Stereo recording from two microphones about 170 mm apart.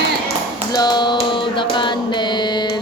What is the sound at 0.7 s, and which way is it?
Mantra, 25° left (ahead or behind).